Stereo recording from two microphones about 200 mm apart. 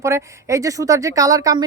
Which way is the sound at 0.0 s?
15° right (ahead or behind).